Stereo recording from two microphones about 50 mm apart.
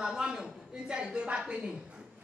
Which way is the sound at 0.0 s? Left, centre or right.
Centre.